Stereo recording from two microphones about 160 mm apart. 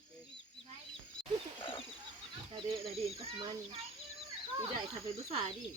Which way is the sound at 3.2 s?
35° right (ahead or behind).